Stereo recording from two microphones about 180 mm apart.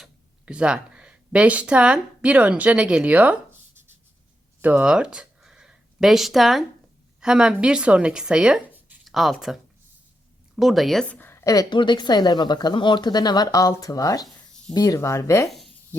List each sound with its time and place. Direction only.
0.0 s a woman's voice: 5° right (ahead or behind); by 15.4 s 15° left (ahead or behind)
15.4 s speech: centre (ahead or behind)